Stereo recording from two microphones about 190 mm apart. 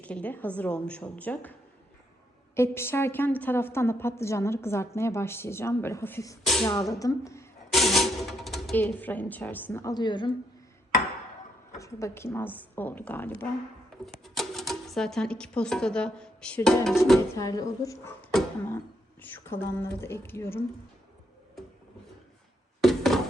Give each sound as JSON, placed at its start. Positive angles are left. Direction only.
{"t": 0.0, "sound": "a woman's voice", "side_deg": 5}
{"t": 2.6, "sound": "a woman's voice", "side_deg": 15}
{"t": 6.4, "sound": "speech", "side_deg": 0}
{"t": 7.0, "sound": "a woman's voice", "side_deg": 15}
{"t": 7.7, "sound": "speech", "side_deg": 0}
{"t": 11.8, "sound": "a woman's voice", "side_deg": 15}
{"t": 17.3, "sound": "a woman's voice", "side_deg": 20}
{"t": 18.3, "sound": "a sound", "side_deg": 0}
{"t": 19.2, "sound": "a woman's voice", "side_deg": 10}
{"t": 22.8, "sound": "a sound", "side_deg": 0}